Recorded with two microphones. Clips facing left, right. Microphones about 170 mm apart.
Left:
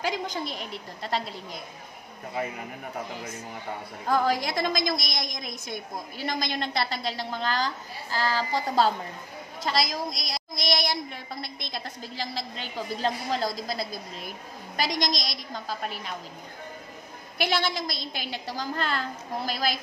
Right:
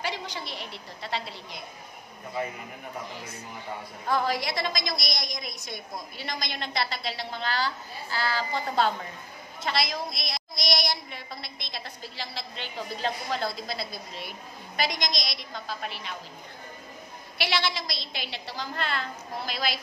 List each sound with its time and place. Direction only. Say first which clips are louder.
0.0 s a woman's voice: left 4 dB; 45° left (ahead or behind)
4.1 s a woman's voice: left 2 dB; 45° left (ahead or behind)
17.4 s a woman's voice: left 2 dB; 45° left (ahead or behind)